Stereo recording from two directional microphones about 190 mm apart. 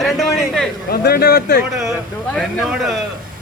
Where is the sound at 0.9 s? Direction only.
55° left (ahead or behind).